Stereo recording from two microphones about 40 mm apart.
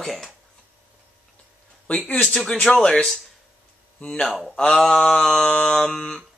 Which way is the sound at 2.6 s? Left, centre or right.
Centre.